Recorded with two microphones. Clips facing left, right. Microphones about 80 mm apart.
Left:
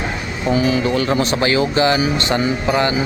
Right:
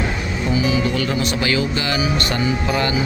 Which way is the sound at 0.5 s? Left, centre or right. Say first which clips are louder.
Left 3 dB; left.